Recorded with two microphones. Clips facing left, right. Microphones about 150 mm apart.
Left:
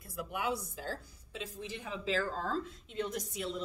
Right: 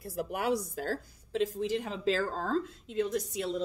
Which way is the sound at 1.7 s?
80° right.